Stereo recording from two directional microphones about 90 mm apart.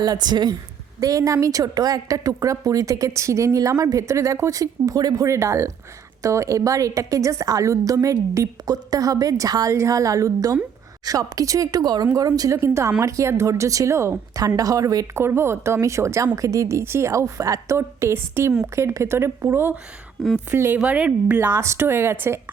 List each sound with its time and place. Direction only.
0.0 s a woman's voice: 50° right (ahead or behind)
0.9 s a woman's voice: 35° right (ahead or behind)
15.2 s a woman's voice: 30° right (ahead or behind)
20.7 s a woman's voice: 15° right (ahead or behind)
21.4 s speech: 30° right (ahead or behind)